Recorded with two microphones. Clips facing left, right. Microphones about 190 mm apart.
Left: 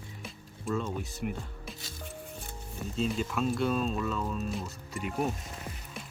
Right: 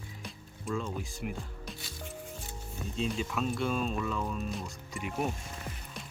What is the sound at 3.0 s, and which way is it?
Speech, centre (ahead or behind).